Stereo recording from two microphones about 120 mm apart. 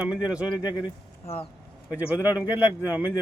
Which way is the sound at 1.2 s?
60° left (ahead or behind).